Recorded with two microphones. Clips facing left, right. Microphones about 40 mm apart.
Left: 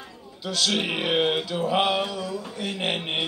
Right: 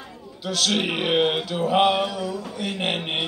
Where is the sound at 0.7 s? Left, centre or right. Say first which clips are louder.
Right 2 dB; centre.